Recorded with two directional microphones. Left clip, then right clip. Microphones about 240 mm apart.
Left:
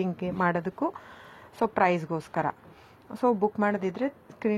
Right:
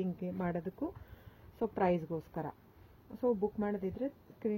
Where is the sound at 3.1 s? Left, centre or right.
Centre.